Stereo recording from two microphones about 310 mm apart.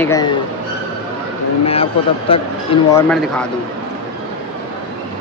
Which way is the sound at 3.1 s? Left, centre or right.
Centre.